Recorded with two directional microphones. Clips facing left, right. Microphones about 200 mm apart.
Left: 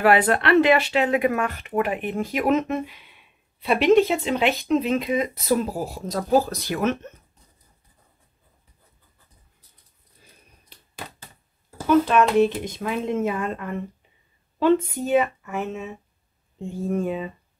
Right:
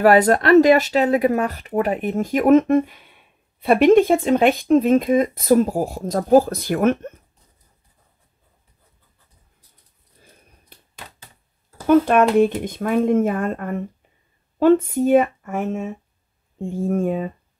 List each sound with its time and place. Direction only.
0.0 s speech: 40° right (ahead or behind)
11.9 s speech: 50° right (ahead or behind)